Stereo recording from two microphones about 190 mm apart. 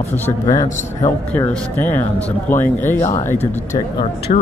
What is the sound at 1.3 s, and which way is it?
Speech, 10° left (ahead or behind).